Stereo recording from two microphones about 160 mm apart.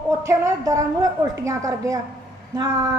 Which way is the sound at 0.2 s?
20° right (ahead or behind).